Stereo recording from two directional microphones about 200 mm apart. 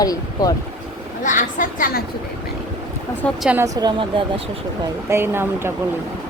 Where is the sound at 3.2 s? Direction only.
Centre (ahead or behind).